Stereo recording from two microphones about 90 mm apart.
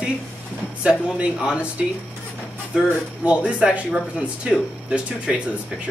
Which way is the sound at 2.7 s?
15° right (ahead or behind).